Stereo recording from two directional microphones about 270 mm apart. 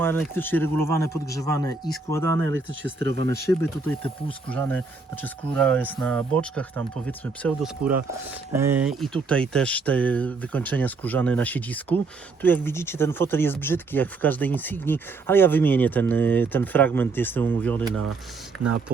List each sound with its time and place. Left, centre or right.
0.0 s speech: centre
2.3 s speech: right
3.6 s speech: centre
8.5 s speech: centre